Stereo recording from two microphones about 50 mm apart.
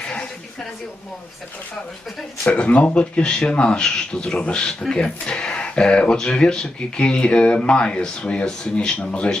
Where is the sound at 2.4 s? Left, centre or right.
Left.